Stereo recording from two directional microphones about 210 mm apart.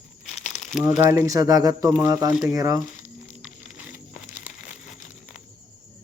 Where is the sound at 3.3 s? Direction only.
Centre (ahead or behind).